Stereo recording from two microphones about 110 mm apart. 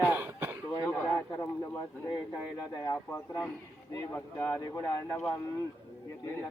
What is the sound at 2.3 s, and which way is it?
Speech, 30° left (ahead or behind).